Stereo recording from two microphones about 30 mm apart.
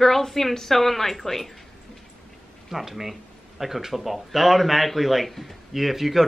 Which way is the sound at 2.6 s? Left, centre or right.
Centre.